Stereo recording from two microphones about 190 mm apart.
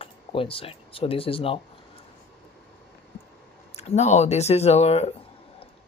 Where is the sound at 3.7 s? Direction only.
35° left (ahead or behind).